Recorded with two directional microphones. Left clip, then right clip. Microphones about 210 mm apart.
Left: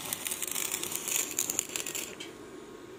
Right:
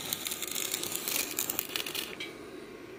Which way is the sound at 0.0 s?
15° right (ahead or behind).